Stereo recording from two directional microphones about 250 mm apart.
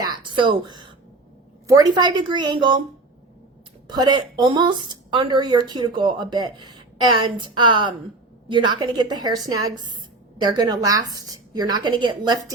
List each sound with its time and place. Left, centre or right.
0.0 s a sound: centre
1.6 s speech: centre
3.8 s speech: centre